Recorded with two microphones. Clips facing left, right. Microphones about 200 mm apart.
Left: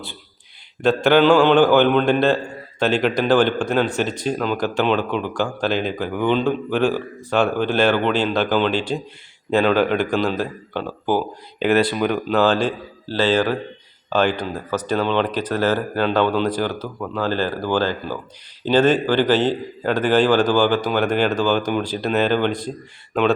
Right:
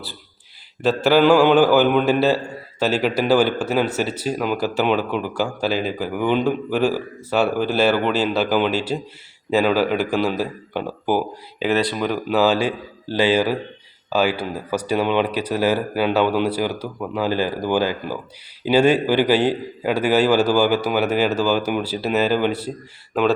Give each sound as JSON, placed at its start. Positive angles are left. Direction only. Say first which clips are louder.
{"t": 0.8, "sound": "a man's voice", "louder": "left 1 dB", "side_deg": -5}